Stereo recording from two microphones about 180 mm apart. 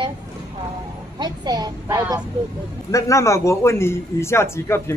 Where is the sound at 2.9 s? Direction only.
15° left (ahead or behind).